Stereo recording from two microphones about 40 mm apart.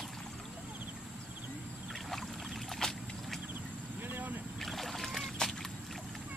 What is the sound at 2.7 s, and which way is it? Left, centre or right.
Boat, centre.